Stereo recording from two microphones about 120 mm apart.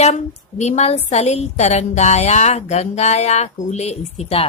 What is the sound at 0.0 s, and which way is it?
Speech, 75° left (ahead or behind).